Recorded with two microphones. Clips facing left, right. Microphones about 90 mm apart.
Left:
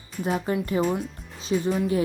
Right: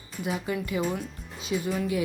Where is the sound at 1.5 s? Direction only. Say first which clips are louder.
Left 4 dB; 30° left (ahead or behind).